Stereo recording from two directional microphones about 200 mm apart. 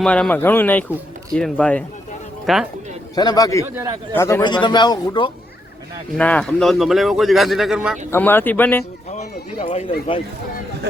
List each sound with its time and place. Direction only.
0.0 s speech: 5° left (ahead or behind)
3.2 s a man's voice: 20° left (ahead or behind)
6.1 s speech: 5° left (ahead or behind)
8.1 s speech: 10° left (ahead or behind)
9.0 s speech: 35° left (ahead or behind)